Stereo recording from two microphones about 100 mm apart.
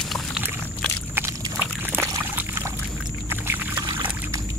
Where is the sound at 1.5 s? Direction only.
20° right (ahead or behind).